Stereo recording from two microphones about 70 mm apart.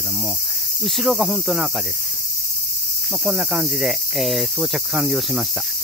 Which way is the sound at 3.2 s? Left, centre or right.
Centre.